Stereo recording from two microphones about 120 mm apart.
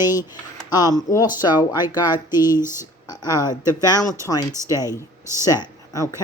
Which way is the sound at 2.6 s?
20° right (ahead or behind).